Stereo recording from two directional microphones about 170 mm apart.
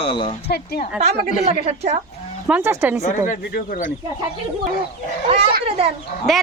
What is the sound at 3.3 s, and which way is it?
Speech, 50° left (ahead or behind).